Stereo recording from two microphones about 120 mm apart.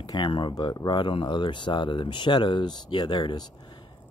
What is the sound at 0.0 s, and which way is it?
Speech, 35° left (ahead or behind).